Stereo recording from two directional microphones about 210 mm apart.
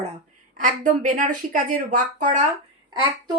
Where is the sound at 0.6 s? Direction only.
40° right (ahead or behind).